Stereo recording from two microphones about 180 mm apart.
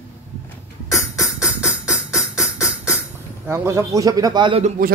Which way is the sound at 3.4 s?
15° right (ahead or behind).